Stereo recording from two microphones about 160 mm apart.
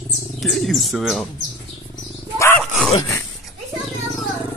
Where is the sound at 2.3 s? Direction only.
15° left (ahead or behind).